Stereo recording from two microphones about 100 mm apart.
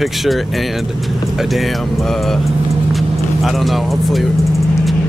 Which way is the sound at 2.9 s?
Centre (ahead or behind).